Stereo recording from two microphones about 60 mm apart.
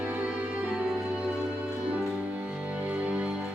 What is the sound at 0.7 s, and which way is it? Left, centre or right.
Music, centre.